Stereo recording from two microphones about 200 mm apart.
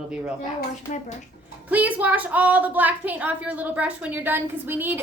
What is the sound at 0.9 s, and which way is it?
Speech, 50° left (ahead or behind).